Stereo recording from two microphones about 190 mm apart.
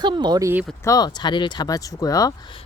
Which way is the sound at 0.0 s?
25° right (ahead or behind).